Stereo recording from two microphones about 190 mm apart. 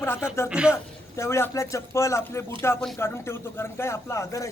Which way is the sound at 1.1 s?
15° left (ahead or behind).